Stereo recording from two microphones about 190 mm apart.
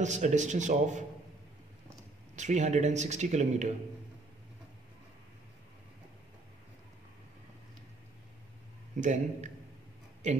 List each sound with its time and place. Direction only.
0.0 s speech: 40° right (ahead or behind)
2.3 s speech: 40° right (ahead or behind)
8.9 s speech: 40° right (ahead or behind)